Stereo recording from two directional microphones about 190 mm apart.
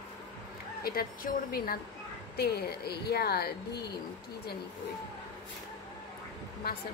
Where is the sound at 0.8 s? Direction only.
50° left (ahead or behind).